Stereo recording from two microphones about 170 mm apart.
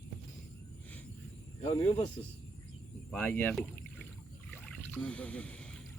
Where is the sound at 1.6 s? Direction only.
35° left (ahead or behind).